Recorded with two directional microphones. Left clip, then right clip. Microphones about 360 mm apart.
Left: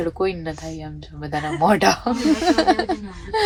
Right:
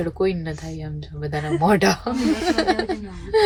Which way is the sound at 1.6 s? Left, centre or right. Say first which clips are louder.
Left 2 dB; centre.